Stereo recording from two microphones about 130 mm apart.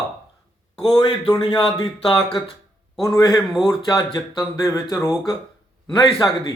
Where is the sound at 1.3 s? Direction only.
30° left (ahead or behind).